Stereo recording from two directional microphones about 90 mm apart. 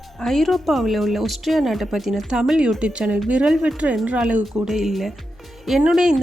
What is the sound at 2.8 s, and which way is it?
Speech, 10° right (ahead or behind).